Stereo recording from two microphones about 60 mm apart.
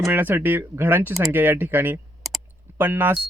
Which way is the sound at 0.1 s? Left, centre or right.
Right.